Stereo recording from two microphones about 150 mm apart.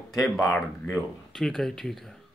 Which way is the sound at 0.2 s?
Centre (ahead or behind).